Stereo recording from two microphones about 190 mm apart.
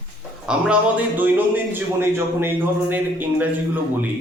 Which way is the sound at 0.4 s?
5° right (ahead or behind).